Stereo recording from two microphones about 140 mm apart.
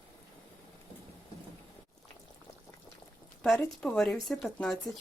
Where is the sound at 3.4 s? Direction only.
10° left (ahead or behind).